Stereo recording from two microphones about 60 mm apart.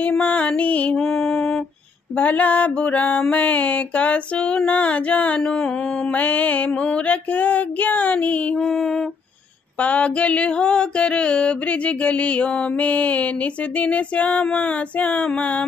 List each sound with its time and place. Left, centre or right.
0.2 s female singing: left
1.0 s lullaby: centre
2.1 s female singing: left
8.5 s mantra: centre
9.8 s female singing: left